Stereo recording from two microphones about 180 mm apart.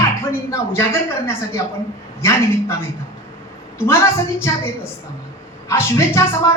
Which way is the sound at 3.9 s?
15° left (ahead or behind).